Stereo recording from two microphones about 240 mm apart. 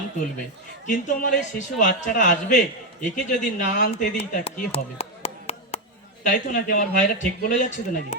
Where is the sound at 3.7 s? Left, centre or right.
Left.